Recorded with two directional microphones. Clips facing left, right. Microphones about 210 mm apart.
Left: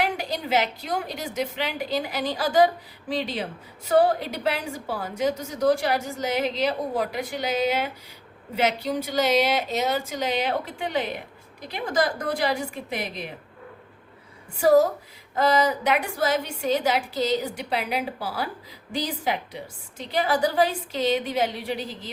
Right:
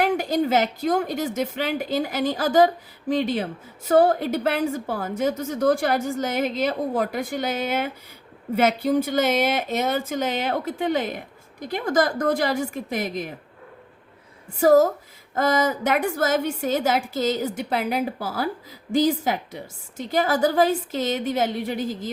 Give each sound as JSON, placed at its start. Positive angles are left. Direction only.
{"t": 0.0, "sound": "a woman's voice", "side_deg": -45}
{"t": 14.6, "sound": "a woman's voice", "side_deg": -45}